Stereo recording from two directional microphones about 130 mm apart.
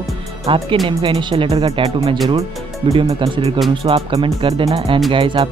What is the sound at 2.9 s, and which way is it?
Speech, 40° right (ahead or behind).